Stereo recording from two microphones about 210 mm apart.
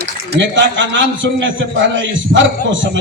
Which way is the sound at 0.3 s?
60° right (ahead or behind).